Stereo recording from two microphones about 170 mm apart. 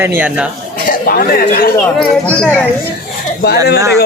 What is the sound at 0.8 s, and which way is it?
Speech, 60° left (ahead or behind).